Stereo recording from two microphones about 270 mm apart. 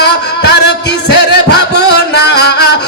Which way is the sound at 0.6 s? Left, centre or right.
Left.